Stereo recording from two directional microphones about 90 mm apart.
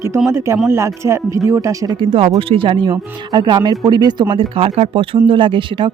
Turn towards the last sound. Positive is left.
turn(degrees=-75)  # may be behind; listen again after turning